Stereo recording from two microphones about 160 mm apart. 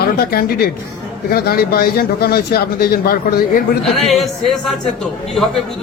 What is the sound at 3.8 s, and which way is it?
A man's voice, centre (ahead or behind).